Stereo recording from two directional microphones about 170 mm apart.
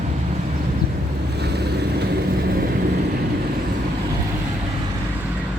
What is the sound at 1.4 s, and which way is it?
Vehicle, 75° right (ahead or behind).